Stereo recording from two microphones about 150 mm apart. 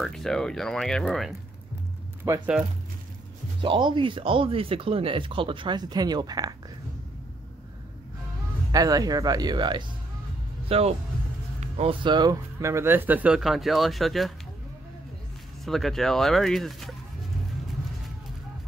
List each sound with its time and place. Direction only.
0.0 s speech: centre (ahead or behind)
2.3 s speech: 20° right (ahead or behind)
3.6 s speech: 35° right (ahead or behind)
8.7 s speech: 25° right (ahead or behind)
10.7 s speech: 40° right (ahead or behind); by 14.3 s centre (ahead or behind)
15.6 s speech: centre (ahead or behind)